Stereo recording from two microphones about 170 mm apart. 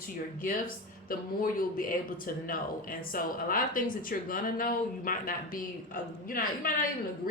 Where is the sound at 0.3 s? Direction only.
55° left (ahead or behind).